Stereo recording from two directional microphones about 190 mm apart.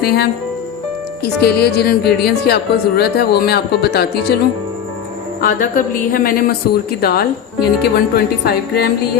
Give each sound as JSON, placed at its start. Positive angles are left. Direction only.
{"t": 0.0, "sound": "speech", "side_deg": 55}
{"t": 5.4, "sound": "a sound", "side_deg": 45}
{"t": 7.0, "sound": "speech", "side_deg": 55}